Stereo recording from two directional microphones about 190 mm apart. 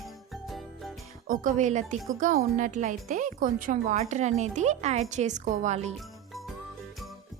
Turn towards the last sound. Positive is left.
turn(degrees=0)  # may be behind; listen again after turning